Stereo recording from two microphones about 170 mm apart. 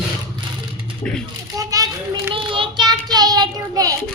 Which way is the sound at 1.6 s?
20° right (ahead or behind).